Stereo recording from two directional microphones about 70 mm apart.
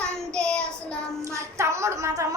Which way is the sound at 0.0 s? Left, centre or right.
Centre.